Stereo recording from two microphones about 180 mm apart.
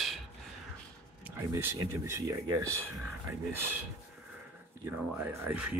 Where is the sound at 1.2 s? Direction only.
10° right (ahead or behind).